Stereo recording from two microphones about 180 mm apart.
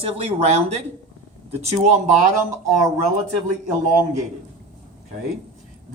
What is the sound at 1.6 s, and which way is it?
Speech, 40° right (ahead or behind).